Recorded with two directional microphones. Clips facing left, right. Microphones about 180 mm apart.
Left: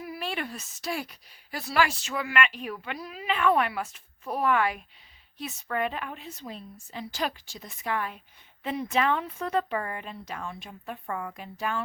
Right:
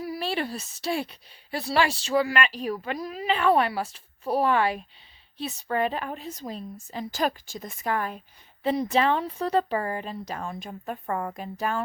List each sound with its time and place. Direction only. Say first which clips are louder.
0.0 s a woman's voice: right 5 dB; 35° right (ahead or behind)